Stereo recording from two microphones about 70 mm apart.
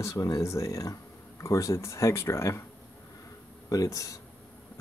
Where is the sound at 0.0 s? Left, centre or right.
Left.